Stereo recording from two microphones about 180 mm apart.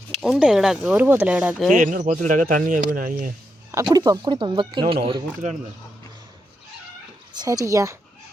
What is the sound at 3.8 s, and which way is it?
A woman's voice, 20° right (ahead or behind).